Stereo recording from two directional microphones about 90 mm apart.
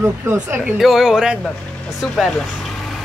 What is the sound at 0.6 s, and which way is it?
Speech, 5° right (ahead or behind).